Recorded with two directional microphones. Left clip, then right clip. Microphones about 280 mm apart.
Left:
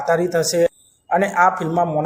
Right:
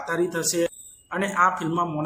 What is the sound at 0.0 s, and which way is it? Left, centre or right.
Speech, centre.